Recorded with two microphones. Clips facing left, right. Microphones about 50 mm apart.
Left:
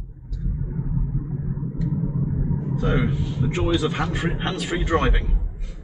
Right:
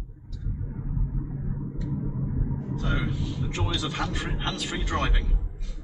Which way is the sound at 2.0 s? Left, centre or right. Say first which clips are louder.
Left 5 dB; centre.